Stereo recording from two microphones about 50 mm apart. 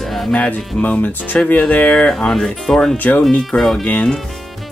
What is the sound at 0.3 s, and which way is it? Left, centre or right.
Speech, left.